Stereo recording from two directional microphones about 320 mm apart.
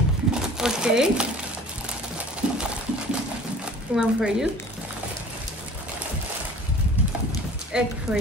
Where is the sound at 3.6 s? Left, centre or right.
Centre.